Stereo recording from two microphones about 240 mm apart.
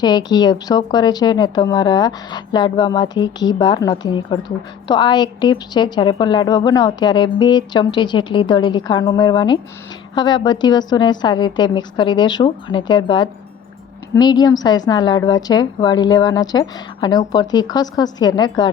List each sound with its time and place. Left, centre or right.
0.0 s speech: centre